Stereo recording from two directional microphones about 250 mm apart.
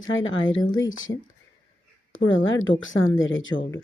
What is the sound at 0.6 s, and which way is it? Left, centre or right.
Speech, centre.